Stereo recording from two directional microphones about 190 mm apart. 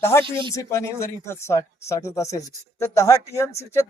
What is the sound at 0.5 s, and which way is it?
Speech, 15° left (ahead or behind).